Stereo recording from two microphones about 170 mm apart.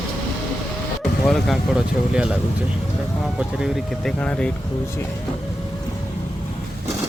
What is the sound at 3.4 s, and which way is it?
Speech, 5° right (ahead or behind).